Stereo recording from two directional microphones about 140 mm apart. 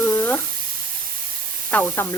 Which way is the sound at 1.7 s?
10° left (ahead or behind).